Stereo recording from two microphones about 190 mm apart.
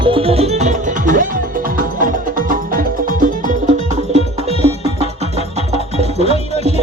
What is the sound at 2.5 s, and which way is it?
Music, 45° right (ahead or behind).